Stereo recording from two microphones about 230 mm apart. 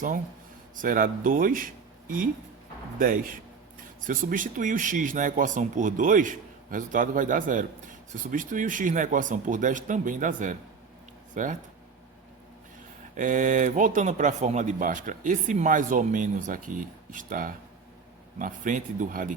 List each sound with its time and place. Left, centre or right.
0.8 s speech: right
13.1 s speech: right